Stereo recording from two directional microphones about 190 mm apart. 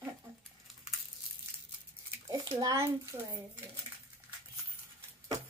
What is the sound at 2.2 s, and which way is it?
A child's voice, 20° right (ahead or behind).